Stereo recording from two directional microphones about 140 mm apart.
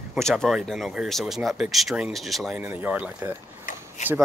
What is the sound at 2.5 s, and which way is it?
Speech, 10° right (ahead or behind).